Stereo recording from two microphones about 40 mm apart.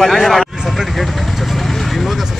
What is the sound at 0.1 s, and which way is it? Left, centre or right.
Speech, centre.